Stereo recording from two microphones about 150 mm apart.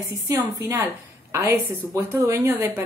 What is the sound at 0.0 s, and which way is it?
A woman's voice, 15° right (ahead or behind).